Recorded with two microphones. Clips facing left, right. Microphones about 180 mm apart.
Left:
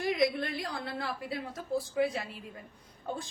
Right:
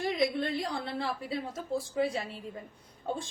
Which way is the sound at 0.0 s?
25° right (ahead or behind).